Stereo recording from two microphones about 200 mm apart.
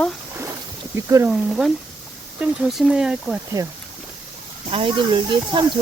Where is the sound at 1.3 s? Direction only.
5° right (ahead or behind).